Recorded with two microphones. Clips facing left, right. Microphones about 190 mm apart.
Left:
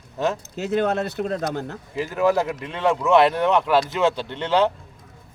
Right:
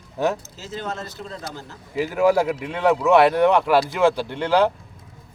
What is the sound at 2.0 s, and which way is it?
Speech, 10° right (ahead or behind).